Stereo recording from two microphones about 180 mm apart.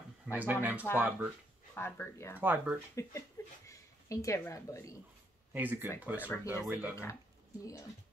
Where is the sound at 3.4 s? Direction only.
15° left (ahead or behind).